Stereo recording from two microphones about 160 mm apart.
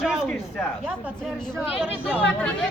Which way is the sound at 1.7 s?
5° right (ahead or behind).